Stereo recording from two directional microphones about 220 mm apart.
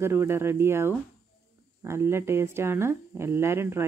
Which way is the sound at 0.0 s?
10° right (ahead or behind).